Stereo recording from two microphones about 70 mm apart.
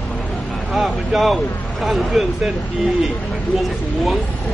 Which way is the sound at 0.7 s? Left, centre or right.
Centre.